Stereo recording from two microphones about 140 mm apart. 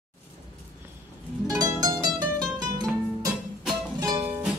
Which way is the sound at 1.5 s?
25° right (ahead or behind).